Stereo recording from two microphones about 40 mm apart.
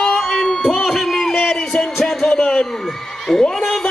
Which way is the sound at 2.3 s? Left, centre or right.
Centre.